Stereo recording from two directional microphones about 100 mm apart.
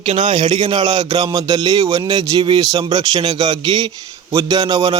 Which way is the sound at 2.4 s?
45° right (ahead or behind).